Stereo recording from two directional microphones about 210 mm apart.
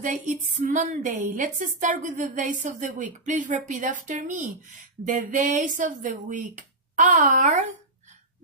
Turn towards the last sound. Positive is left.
turn(degrees=-35)  # may be behind; listen again after turning